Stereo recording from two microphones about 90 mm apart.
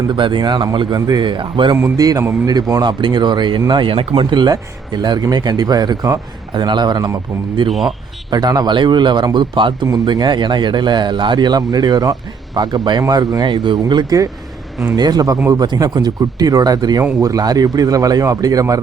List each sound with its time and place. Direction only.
0.1 s speech: 65° right (ahead or behind)
2.0 s speech: 45° right (ahead or behind)
2.8 s speech: 55° right (ahead or behind)
3.7 s speech: 70° right (ahead or behind); by 7.1 s 50° right (ahead or behind)
7.7 s a man's voice: centre (ahead or behind)
8.3 s speech: 50° right (ahead or behind)
9.8 s speech: 45° right (ahead or behind)